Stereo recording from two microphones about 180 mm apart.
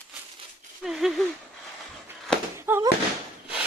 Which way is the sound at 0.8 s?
Centre (ahead or behind).